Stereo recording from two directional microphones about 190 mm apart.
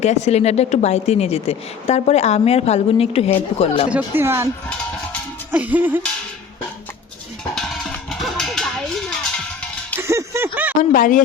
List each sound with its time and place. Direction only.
0.0 s speech: 35° left (ahead or behind)
3.8 s speech: 10° right (ahead or behind)
5.5 s speech: 10° right (ahead or behind)
7.5 s music: centre (ahead or behind)
10.0 s a sound: 15° right (ahead or behind)
10.8 s speech: 45° left (ahead or behind)